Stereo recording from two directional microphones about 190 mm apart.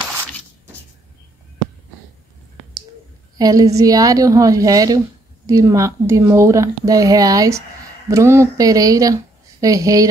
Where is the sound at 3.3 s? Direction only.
20° right (ahead or behind).